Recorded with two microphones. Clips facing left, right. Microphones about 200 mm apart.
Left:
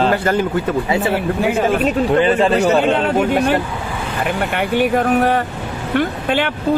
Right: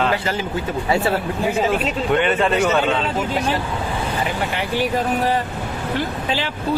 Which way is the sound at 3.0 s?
60° left (ahead or behind).